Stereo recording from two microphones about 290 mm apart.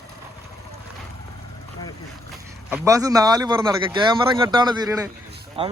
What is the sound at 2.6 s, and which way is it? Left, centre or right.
A man's voice, centre.